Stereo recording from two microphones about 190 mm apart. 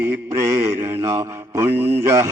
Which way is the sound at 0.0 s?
15° right (ahead or behind).